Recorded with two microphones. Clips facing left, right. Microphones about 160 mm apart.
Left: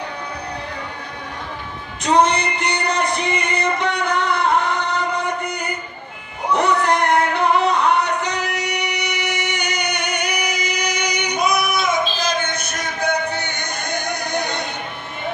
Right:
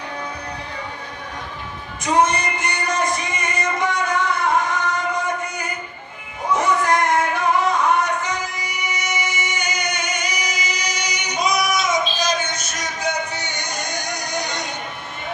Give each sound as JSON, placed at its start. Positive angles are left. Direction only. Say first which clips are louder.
{"t": 2.0, "sound": "music", "louder": "left 2 dB", "side_deg": 70}
{"t": 6.5, "sound": "singing", "louder": "left 1 dB", "side_deg": 65}